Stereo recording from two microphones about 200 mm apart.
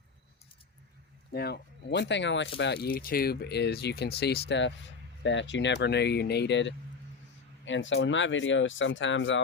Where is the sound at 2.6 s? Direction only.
55° left (ahead or behind).